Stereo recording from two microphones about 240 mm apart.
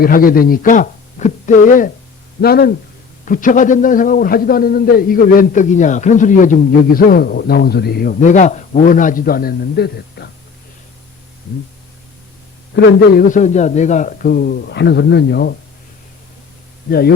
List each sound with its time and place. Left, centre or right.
0.0 s a man's voice: left
12.7 s a man's voice: left
16.9 s a man's voice: left